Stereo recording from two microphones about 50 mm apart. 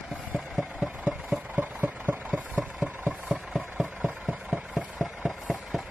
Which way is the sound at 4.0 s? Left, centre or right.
Right.